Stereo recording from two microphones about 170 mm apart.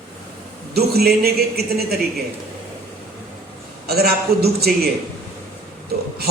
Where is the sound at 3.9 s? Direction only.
65° right (ahead or behind).